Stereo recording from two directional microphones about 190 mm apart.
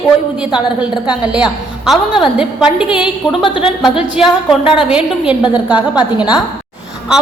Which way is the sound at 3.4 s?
25° left (ahead or behind).